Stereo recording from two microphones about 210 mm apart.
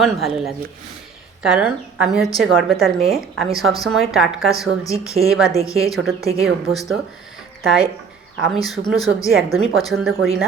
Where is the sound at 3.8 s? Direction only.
Centre (ahead or behind).